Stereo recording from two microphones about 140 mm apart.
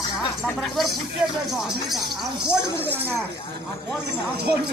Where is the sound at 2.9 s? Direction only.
15° right (ahead or behind).